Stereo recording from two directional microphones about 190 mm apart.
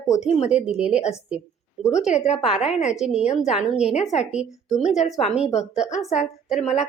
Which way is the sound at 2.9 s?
5° right (ahead or behind).